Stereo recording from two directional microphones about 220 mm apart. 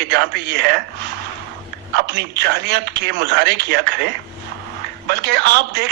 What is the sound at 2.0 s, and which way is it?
A man's voice, 50° right (ahead or behind).